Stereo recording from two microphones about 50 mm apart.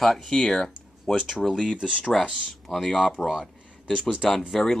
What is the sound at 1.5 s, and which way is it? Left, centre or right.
Speech, centre.